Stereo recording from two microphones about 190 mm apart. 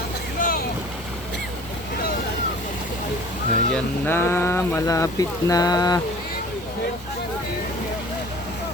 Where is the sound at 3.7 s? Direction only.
10° left (ahead or behind).